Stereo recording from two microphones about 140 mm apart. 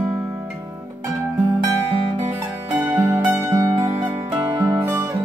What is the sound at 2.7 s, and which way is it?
Zither, 15° right (ahead or behind).